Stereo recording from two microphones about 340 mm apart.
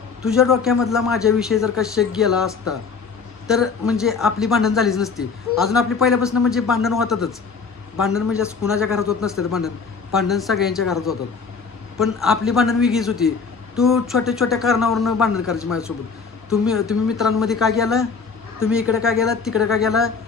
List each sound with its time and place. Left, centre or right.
0.2 s a man's voice: centre